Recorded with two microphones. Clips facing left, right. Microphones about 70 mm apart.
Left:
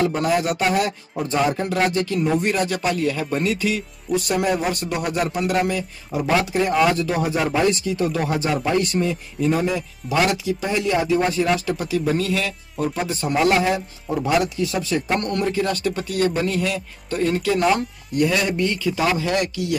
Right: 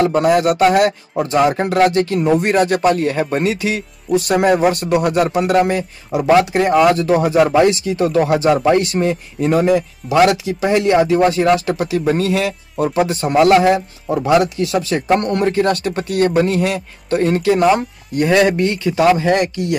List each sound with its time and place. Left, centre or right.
0.0 s a man's voice: right
12.0 s a man's voice: right
15.1 s speech: right
15.4 s speech: right
18.2 s speech: right
19.0 s speech: right